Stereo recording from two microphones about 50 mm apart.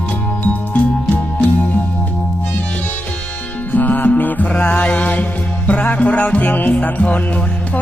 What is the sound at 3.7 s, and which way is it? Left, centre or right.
Music, left.